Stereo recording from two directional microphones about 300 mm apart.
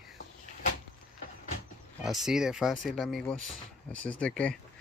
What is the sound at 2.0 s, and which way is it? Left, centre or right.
Speech, centre.